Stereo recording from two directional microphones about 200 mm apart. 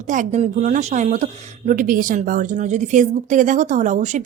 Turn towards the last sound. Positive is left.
turn(degrees=-40)  # may be behind; listen again after turning